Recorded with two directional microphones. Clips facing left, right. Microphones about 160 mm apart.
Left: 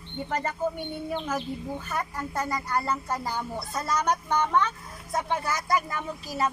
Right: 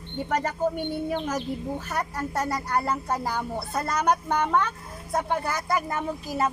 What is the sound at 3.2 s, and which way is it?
Speech, 60° right (ahead or behind).